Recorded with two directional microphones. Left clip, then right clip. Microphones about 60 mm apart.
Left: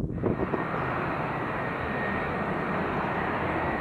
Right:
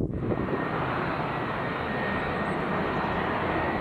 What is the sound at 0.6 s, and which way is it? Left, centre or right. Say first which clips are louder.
Vehicle: right 1 dB; right.